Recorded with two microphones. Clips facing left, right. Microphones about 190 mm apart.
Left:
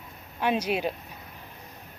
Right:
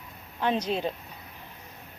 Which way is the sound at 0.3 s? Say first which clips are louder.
Left 1 dB; 10° left (ahead or behind).